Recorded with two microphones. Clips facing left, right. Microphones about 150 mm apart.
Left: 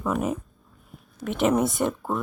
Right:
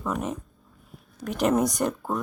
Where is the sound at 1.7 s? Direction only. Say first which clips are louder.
Left 1 dB; centre (ahead or behind).